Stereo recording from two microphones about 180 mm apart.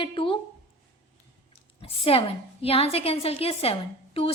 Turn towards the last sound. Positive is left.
turn(degrees=30)  # may be behind; listen again after turning